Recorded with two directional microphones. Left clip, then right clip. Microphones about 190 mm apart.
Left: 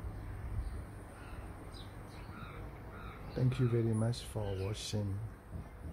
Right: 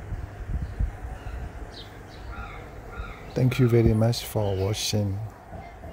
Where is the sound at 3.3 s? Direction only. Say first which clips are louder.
Right 13 dB; 30° right (ahead or behind).